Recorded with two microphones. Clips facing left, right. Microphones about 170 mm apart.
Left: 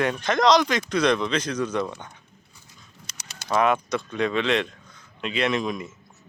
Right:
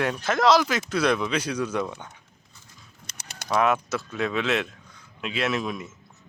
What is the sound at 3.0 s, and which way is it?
Mechanisms, 55° right (ahead or behind).